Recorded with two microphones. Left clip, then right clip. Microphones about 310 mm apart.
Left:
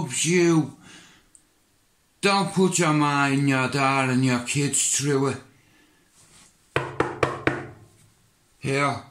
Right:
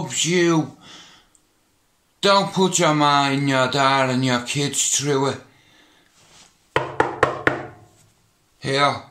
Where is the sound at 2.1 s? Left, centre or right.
Centre.